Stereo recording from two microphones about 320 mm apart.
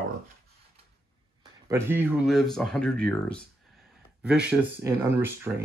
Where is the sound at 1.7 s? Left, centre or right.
Centre.